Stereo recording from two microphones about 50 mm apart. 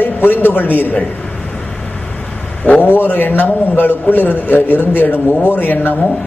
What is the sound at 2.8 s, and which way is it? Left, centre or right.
A man's voice, left.